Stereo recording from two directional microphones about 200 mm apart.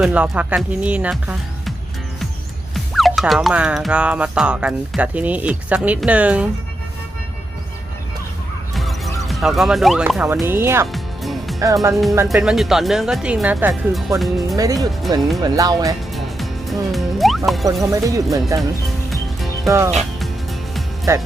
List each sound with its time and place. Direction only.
0.0 s speech: 5° right (ahead or behind)
2.7 s speech: centre (ahead or behind)
8.7 s speech: centre (ahead or behind)
10.9 s music: centre (ahead or behind)
11.6 s speech: 15° right (ahead or behind)
12.3 s speech: centre (ahead or behind)
14.5 s speech: 15° right (ahead or behind)
16.1 s music: centre (ahead or behind)
17.9 s speech: 15° right (ahead or behind)
19.6 s speech: 15° right (ahead or behind)
20.0 s music: centre (ahead or behind)